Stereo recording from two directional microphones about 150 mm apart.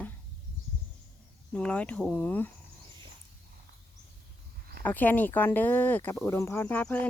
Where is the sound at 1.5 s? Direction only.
10° left (ahead or behind).